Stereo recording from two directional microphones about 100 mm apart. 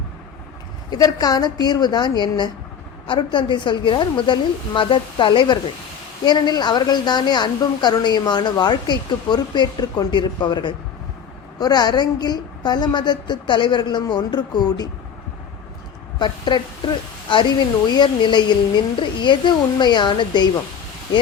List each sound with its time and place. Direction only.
0.9 s a woman's voice: 40° left (ahead or behind)
16.1 s a woman's voice: 50° left (ahead or behind)